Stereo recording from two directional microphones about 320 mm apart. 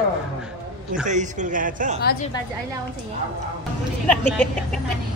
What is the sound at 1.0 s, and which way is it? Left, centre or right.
Speech, right.